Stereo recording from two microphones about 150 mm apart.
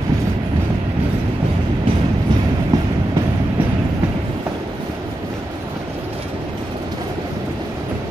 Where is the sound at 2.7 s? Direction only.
20° right (ahead or behind).